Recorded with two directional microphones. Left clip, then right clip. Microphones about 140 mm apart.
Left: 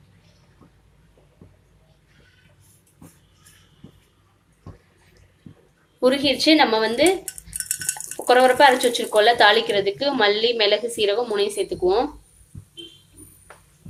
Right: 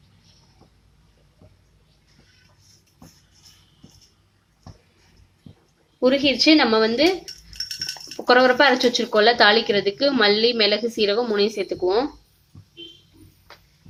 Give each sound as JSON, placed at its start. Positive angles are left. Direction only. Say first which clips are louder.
{"t": 6.0, "sound": "a woman's voice", "louder": "even", "side_deg": -45}
{"t": 6.4, "sound": "a woman's voice", "louder": "even", "side_deg": -60}